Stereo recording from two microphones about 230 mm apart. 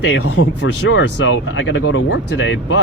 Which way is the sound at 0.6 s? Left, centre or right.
Left.